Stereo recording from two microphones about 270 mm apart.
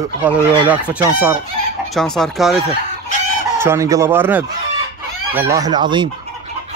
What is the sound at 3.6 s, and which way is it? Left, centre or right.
Chicken, centre.